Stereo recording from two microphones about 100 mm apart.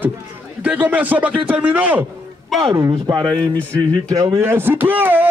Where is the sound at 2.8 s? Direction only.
35° right (ahead or behind).